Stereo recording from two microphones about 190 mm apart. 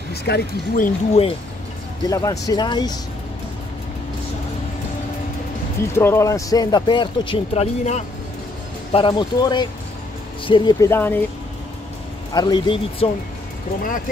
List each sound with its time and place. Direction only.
0.1 s speech: 55° left (ahead or behind)
2.0 s speech: 20° left (ahead or behind)
5.9 s speech: 15° left (ahead or behind)
12.4 s speech: 25° left (ahead or behind)